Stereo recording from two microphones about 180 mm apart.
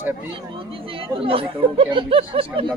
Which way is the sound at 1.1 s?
30° right (ahead or behind).